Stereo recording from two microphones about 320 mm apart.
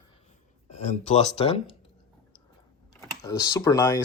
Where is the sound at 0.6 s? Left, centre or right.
Left.